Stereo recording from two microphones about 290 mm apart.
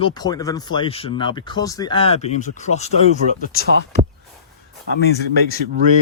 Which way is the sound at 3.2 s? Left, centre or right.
Right.